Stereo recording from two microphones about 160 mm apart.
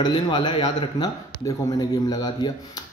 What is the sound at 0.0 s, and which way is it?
Speech, 30° left (ahead or behind).